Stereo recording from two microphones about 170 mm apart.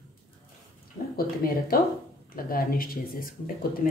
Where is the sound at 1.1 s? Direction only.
60° left (ahead or behind).